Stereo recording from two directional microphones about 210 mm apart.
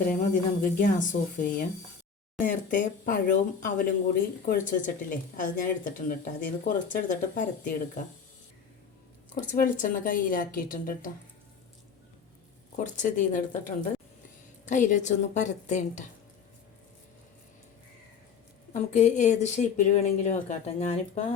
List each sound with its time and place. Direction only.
0.1 s speech: 40° left (ahead or behind)
9.3 s speech: 40° left (ahead or behind)
12.7 s speech: 35° left (ahead or behind)
18.7 s speech: 35° left (ahead or behind)